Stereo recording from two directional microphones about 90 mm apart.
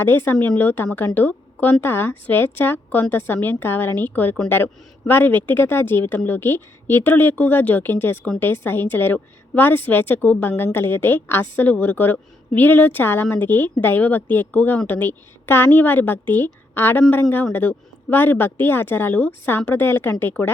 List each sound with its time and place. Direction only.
0.0 s a woman's voice: 25° left (ahead or behind)